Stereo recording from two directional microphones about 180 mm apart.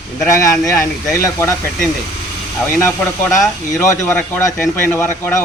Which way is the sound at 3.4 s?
15° left (ahead or behind).